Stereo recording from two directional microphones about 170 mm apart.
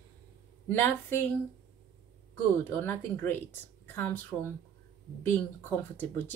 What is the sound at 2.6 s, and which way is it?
Speech, 10° left (ahead or behind).